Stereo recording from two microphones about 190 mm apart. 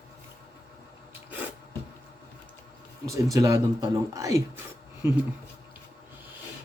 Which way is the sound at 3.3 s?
15° right (ahead or behind).